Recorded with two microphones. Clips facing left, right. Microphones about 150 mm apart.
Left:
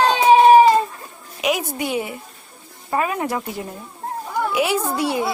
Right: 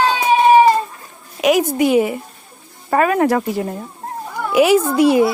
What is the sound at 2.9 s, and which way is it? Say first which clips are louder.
Speech: right 7 dB; 65° right (ahead or behind).